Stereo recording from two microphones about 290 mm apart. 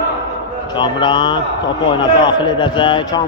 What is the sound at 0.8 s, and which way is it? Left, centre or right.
A man's voice, centre.